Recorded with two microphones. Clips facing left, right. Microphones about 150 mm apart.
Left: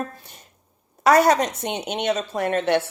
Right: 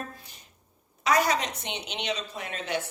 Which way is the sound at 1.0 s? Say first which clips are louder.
Left 8 dB; 60° left (ahead or behind).